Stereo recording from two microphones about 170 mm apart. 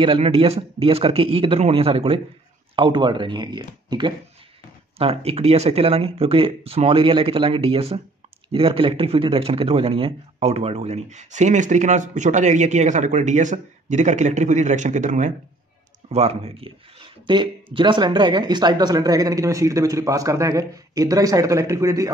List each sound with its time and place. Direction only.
0.0 s speech: 35° right (ahead or behind)